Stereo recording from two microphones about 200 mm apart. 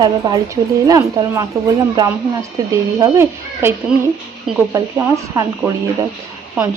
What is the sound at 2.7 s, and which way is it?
A woman's voice, 15° right (ahead or behind).